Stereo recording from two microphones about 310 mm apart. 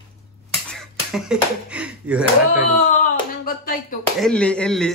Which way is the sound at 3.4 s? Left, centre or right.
Left.